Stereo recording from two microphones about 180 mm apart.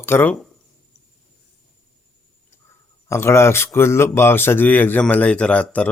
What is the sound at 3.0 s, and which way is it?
Speech, 15° left (ahead or behind).